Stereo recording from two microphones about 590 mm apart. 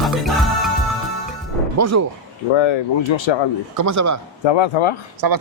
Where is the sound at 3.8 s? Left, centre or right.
Right.